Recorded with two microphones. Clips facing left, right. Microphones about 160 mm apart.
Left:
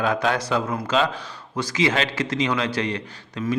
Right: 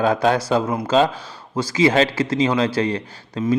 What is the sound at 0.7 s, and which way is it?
A man's voice, 20° right (ahead or behind).